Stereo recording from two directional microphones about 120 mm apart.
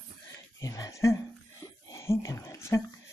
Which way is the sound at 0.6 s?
30° left (ahead or behind).